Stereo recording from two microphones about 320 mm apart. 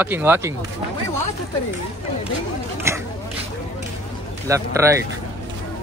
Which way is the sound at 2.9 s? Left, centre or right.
Centre.